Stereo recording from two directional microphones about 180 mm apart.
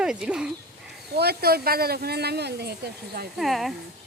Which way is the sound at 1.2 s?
60° right (ahead or behind).